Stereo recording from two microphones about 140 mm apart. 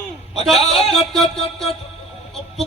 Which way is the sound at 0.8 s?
Centre (ahead or behind).